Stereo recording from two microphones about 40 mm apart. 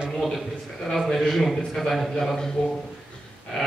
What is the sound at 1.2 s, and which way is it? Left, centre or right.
A man's voice, centre.